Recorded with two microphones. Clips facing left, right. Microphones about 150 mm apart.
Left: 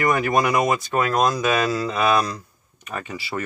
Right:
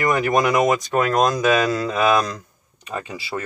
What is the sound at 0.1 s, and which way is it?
Speech, 20° right (ahead or behind).